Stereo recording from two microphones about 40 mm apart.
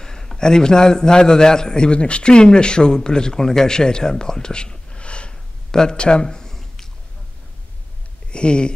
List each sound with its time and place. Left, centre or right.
0.0 s a man's voice: centre
5.7 s a sound: centre
8.3 s speech: left